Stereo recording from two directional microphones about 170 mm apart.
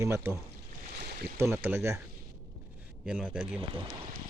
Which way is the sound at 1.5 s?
10° right (ahead or behind).